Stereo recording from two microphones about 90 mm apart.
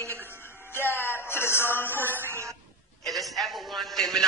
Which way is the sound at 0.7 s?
25° left (ahead or behind).